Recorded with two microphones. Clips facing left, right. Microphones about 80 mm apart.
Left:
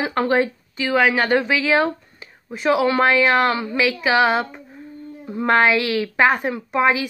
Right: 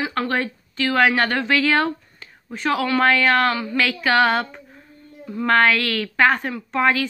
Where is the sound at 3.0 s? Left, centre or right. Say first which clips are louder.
Left 1 dB; centre.